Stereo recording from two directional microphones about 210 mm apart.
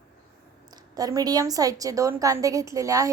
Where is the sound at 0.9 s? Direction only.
15° right (ahead or behind).